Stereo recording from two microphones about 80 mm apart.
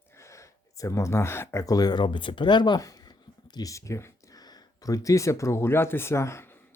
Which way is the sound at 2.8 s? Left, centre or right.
Left.